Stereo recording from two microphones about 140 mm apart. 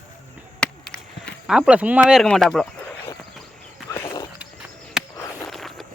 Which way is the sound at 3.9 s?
20° left (ahead or behind).